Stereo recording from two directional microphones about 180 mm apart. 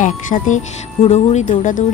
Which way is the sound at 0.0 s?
45° left (ahead or behind).